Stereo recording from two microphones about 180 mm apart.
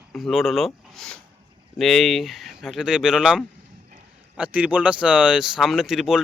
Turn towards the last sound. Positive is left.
turn(degrees=0)  # may be behind; listen again after turning